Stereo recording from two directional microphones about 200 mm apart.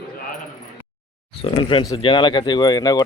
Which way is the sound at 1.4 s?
25° left (ahead or behind).